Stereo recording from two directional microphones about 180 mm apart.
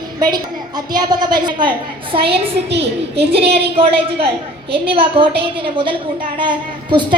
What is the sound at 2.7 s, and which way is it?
Speech, 65° right (ahead or behind).